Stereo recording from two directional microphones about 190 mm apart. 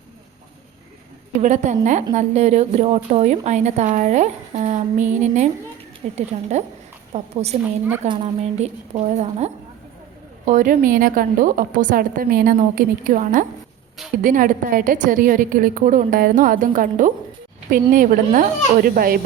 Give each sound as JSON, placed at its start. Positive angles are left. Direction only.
{"t": 1.4, "sound": "a woman's voice", "side_deg": -40}